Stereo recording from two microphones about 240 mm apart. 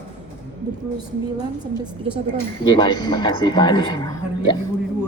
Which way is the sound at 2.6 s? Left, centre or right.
Centre.